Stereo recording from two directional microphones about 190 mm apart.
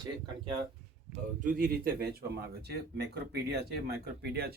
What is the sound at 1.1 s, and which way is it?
Speech, 45° right (ahead or behind).